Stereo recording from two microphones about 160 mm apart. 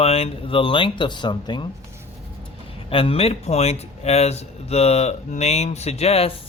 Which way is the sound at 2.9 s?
35° left (ahead or behind).